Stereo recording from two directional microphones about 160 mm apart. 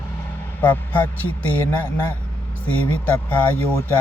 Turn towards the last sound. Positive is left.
turn(degrees=10)  # may be behind; listen again after turning